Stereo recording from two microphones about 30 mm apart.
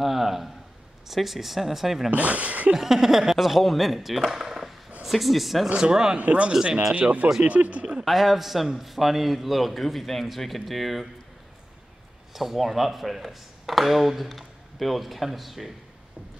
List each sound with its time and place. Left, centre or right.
0.0 s a sound: centre
1.0 s speech: centre
2.0 s speech: right
2.7 s speech: centre
4.3 s a sound: right
5.0 s speech: centre
5.8 s speech: right
6.1 s speech: right
6.5 s speech: centre
6.9 s speech: right
8.0 s speech: centre
12.4 s speech: centre